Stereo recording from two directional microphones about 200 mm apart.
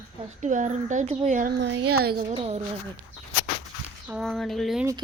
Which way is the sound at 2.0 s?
50° right (ahead or behind).